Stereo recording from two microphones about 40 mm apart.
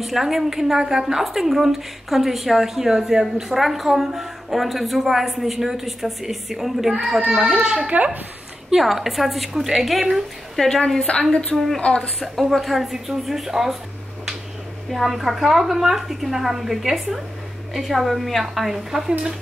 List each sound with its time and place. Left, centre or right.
0.0 s a woman's voice: centre
7.9 s speech: right
8.7 s a woman's voice: centre
10.5 s a woman's voice: centre
11.1 s a woman's voice: left
12.2 s a woman's voice: centre
14.9 s a woman's voice: centre